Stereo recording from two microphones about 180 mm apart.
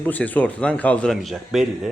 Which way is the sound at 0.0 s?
10° left (ahead or behind).